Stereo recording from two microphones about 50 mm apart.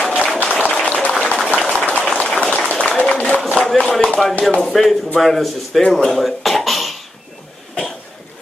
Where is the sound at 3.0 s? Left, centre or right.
Left.